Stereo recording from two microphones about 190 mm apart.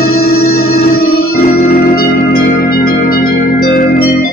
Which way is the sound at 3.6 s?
45° left (ahead or behind).